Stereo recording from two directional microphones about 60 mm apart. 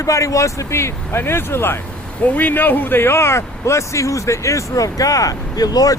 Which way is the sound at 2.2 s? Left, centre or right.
Left.